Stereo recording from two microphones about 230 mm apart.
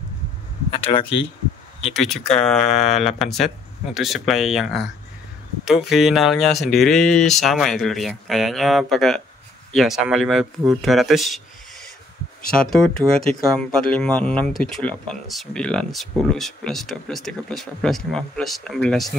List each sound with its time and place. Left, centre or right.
0.8 s speech: left
2.0 s speech: centre